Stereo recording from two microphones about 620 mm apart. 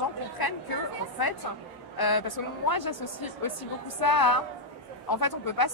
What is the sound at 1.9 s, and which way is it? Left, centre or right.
A woman's voice, left.